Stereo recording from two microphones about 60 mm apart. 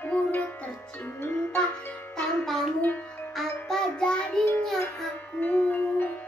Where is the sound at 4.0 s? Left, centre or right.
Centre.